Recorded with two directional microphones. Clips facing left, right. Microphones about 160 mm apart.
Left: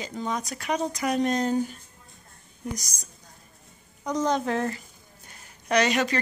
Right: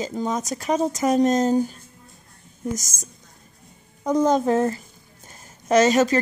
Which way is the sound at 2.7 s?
45° right (ahead or behind).